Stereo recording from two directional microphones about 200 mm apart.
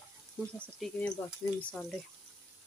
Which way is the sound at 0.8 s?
5° left (ahead or behind).